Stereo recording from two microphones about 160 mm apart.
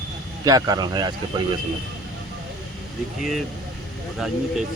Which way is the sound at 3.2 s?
Centre (ahead or behind).